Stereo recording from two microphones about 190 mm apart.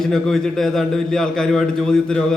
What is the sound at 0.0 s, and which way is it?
A man's voice, centre (ahead or behind).